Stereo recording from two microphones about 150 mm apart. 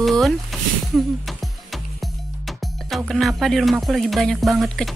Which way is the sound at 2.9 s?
Centre (ahead or behind).